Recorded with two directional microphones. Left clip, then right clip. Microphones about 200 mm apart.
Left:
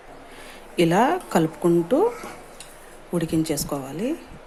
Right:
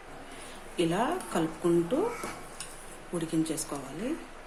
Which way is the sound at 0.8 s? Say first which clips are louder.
Left 10 dB; 35° left (ahead or behind).